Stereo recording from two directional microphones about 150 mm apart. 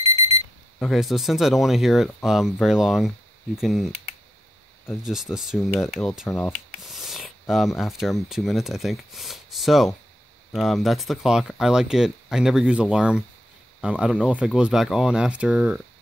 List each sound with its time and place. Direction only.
0.7 s speech: centre (ahead or behind)
5.0 s speech: centre (ahead or behind)